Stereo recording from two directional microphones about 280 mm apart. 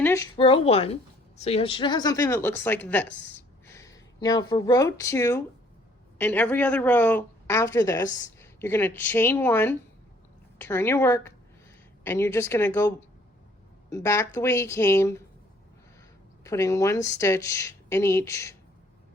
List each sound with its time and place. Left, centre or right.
0.0 s a woman's voice: centre
13.9 s speech: centre
16.4 s speech: centre